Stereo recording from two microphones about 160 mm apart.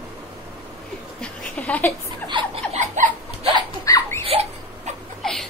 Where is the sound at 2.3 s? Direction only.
40° right (ahead or behind).